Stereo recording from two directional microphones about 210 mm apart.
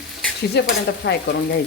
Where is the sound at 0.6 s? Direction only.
55° left (ahead or behind).